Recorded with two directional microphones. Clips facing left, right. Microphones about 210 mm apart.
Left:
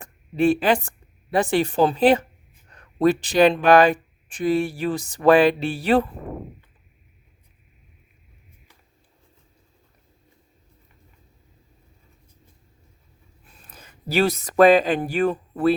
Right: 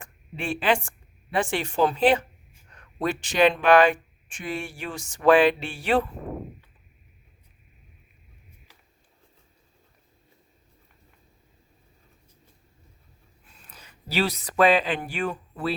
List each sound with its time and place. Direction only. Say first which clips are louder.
0.0 s speech: left 14 dB; 40° left (ahead or behind)
13.7 s speech: left 8 dB; 50° left (ahead or behind)